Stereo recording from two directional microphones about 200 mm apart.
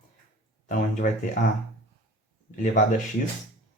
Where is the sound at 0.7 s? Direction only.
40° left (ahead or behind).